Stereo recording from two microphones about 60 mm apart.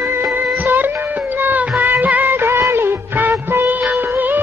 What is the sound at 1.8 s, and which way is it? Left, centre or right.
Music, right.